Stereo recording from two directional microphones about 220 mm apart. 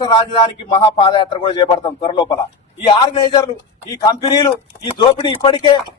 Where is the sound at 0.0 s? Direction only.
20° left (ahead or behind).